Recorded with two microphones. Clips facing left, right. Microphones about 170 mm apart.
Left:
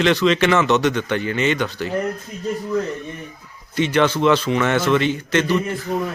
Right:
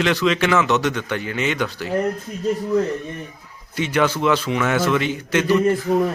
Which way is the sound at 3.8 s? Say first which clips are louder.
Left 2 dB; 5° right (ahead or behind).